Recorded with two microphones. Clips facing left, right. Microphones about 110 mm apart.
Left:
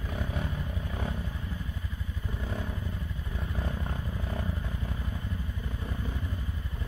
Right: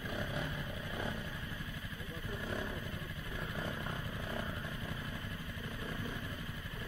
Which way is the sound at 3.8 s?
25° left (ahead or behind).